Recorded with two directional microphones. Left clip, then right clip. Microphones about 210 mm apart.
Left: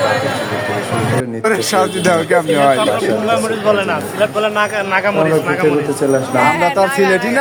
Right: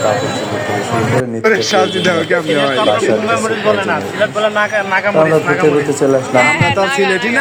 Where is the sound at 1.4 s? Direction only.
60° left (ahead or behind).